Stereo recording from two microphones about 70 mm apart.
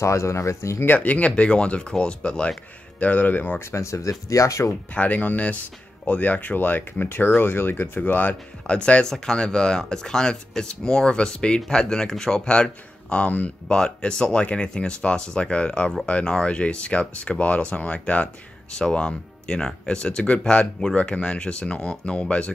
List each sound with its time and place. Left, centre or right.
0.0 s speech: left
0.8 s speech: left
3.7 s speech: left
4.9 s speech: left